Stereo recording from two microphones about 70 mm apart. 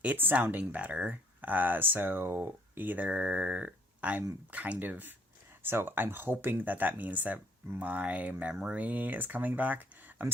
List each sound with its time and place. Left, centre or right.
0.0 s speech: right